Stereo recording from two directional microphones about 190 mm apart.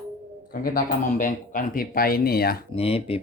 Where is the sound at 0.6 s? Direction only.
45° left (ahead or behind).